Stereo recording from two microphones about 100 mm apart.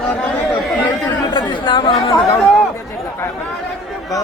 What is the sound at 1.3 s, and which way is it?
Chatter, 50° left (ahead or behind).